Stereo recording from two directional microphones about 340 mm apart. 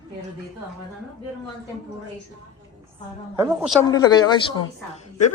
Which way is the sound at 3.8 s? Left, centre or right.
Centre.